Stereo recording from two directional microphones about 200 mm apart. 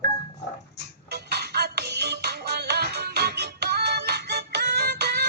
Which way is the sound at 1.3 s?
55° right (ahead or behind).